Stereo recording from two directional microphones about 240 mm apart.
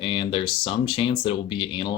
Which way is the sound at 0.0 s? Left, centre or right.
Left.